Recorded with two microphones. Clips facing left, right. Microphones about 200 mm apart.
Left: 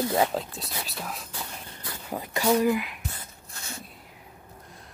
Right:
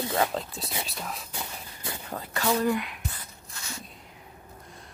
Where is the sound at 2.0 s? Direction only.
15° left (ahead or behind).